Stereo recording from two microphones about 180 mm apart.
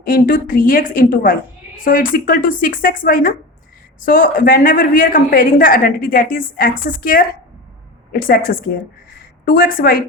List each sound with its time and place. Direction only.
0.0 s a woman's voice: 55° left (ahead or behind)